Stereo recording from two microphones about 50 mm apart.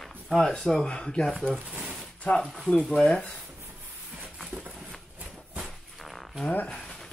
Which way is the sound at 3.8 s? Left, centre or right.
Right.